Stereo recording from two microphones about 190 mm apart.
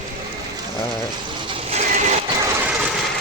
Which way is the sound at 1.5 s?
35° right (ahead or behind).